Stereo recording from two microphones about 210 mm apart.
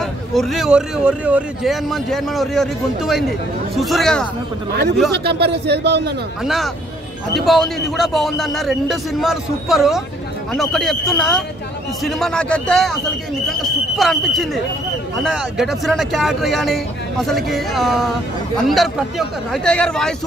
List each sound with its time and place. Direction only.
0.0 s speech: centre (ahead or behind)
5.1 s speech: 50° right (ahead or behind)
6.4 s speech: centre (ahead or behind)